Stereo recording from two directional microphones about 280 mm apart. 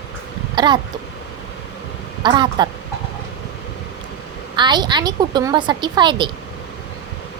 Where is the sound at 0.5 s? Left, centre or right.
Centre.